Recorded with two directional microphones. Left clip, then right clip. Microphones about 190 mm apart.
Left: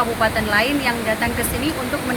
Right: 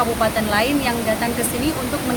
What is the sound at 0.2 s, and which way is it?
Speech, centre (ahead or behind).